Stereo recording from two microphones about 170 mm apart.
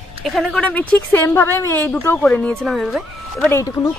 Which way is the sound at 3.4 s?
15° left (ahead or behind).